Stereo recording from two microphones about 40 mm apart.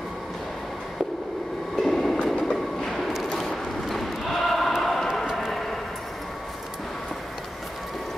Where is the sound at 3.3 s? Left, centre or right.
Centre.